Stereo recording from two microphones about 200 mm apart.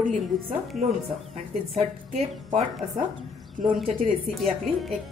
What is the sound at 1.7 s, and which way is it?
A woman's voice, 35° right (ahead or behind).